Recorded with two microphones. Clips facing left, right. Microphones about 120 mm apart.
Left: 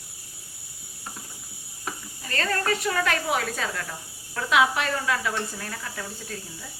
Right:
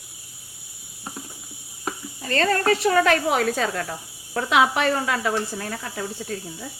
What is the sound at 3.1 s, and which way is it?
Speech, 45° right (ahead or behind).